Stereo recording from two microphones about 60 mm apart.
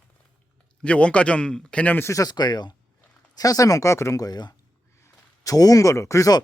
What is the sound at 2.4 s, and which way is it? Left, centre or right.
Speech, left.